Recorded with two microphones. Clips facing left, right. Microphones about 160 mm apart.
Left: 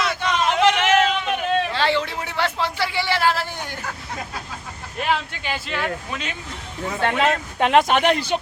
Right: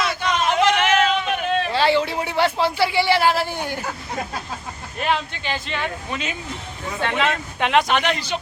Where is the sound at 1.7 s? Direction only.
10° right (ahead or behind).